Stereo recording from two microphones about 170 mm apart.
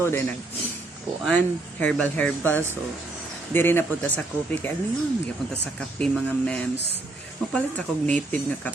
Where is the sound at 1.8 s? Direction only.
5° left (ahead or behind).